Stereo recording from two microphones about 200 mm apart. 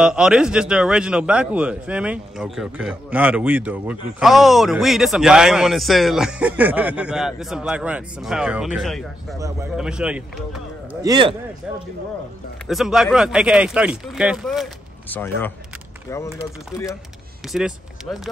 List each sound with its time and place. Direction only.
0.0 s a man's voice: 5° right (ahead or behind)
11.0 s a man's voice: 20° right (ahead or behind)
12.6 s a man's voice: centre (ahead or behind)
15.0 s speech: 10° left (ahead or behind)
17.5 s speech: centre (ahead or behind)